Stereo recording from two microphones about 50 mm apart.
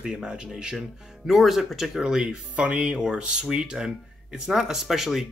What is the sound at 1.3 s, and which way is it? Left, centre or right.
Speech, centre.